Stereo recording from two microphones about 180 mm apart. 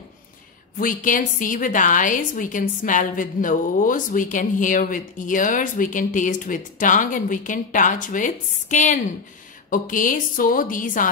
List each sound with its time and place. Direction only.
0.7 s a woman's voice: 50° left (ahead or behind)